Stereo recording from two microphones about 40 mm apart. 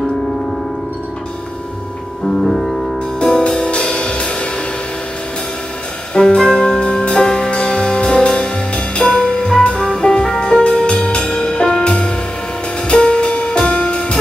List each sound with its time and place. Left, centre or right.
2.5 s music: centre
3.2 s music: centre
6.1 s music: centre